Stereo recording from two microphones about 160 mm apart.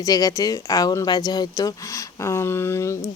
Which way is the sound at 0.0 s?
20° left (ahead or behind).